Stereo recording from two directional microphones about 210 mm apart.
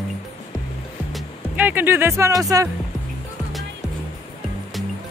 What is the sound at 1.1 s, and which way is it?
Speech, 10° right (ahead or behind).